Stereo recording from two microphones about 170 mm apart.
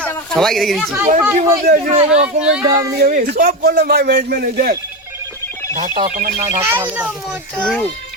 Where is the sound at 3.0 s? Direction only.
55° right (ahead or behind).